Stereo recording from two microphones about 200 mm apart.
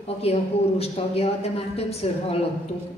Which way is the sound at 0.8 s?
30° left (ahead or behind).